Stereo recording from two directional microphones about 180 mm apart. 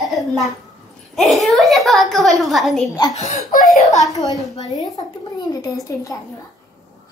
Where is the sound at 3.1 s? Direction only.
40° left (ahead or behind).